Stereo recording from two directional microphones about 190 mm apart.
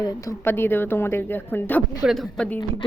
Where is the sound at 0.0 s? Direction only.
20° left (ahead or behind).